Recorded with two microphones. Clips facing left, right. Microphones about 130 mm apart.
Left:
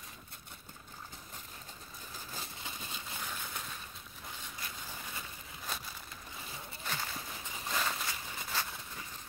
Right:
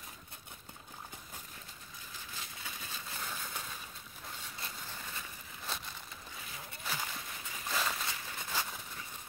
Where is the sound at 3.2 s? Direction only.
Centre (ahead or behind).